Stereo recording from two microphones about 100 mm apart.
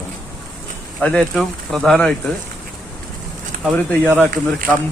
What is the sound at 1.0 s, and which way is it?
Speech, 15° left (ahead or behind).